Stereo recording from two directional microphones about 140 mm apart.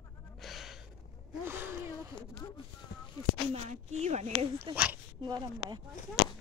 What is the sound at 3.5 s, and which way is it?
Speech, 50° right (ahead or behind).